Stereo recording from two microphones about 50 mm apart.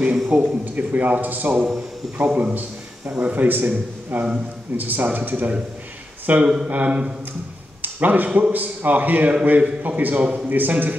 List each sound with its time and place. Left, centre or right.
0.3 s speech: right
6.4 s speech: centre
6.7 s speech: right
7.8 s a sound: right
8.3 s speech: right